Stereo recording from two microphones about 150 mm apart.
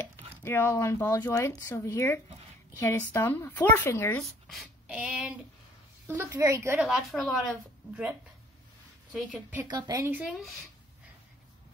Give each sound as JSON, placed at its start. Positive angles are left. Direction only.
{"t": 0.4, "sound": "speech", "side_deg": 15}
{"t": 4.2, "sound": "speech", "side_deg": 0}
{"t": 6.0, "sound": "speech", "side_deg": -20}
{"t": 6.8, "sound": "a woman's voice", "side_deg": 0}
{"t": 9.1, "sound": "speech", "side_deg": -10}
{"t": 9.7, "sound": "speech", "side_deg": -25}
{"t": 10.1, "sound": "a woman's voice", "side_deg": -5}